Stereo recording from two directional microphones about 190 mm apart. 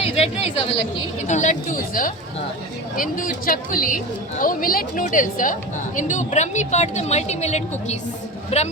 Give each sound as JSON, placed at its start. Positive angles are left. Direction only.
{"t": 0.0, "sound": "speech", "side_deg": 30}
{"t": 1.3, "sound": "speech", "side_deg": 40}